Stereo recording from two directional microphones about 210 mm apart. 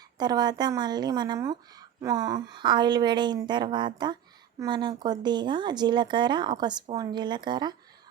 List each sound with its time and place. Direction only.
0.2 s speech: 20° right (ahead or behind)